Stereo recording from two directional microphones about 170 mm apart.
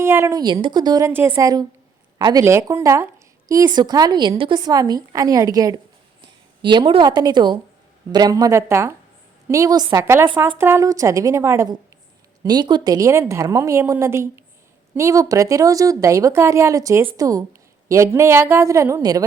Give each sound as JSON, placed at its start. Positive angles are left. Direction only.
{"t": 0.0, "sound": "a woman's voice", "side_deg": -15}